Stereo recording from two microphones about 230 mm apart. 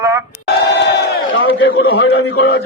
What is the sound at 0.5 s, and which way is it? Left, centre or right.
A man's voice, left.